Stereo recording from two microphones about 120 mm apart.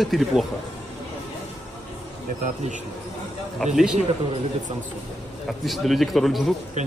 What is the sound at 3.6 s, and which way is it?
Speech, 5° left (ahead or behind).